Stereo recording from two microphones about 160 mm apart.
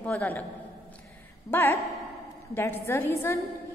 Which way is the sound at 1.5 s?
15° left (ahead or behind).